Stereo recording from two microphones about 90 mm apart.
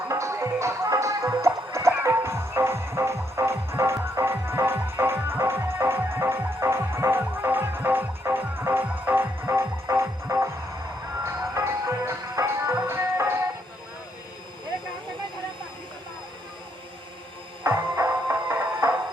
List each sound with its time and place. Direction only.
0.1 s music: 35° right (ahead or behind)
17.7 s music: 45° right (ahead or behind)
18.8 s music: 30° right (ahead or behind)